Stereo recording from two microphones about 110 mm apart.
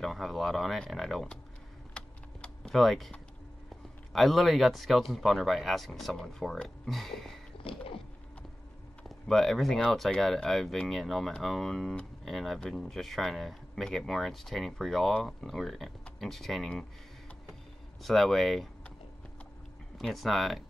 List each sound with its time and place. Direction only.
0.0 s speech: centre (ahead or behind)
2.0 s typing: 10° left (ahead or behind)
4.1 s speech: centre (ahead or behind)
9.1 s speech: 5° left (ahead or behind)
18.0 s speech: centre (ahead or behind)
20.0 s speech: centre (ahead or behind)